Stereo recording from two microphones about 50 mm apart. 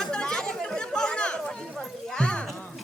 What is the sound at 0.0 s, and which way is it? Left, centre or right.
Chatter, centre.